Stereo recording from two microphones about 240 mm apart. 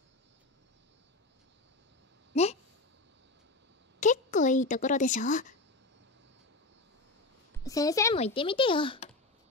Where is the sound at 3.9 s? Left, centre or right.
Left.